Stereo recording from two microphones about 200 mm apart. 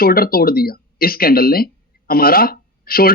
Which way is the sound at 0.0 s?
45° left (ahead or behind).